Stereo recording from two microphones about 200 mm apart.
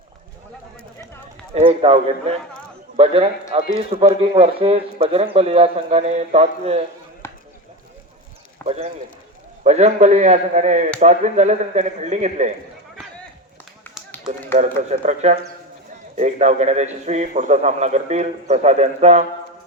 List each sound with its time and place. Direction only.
1.5 s speech: 30° right (ahead or behind)
7.2 s chop: 15° left (ahead or behind)
8.6 s a man's voice: 30° right (ahead or behind)
13.9 s run: 10° left (ahead or behind)
14.8 s a man's voice: 35° right (ahead or behind)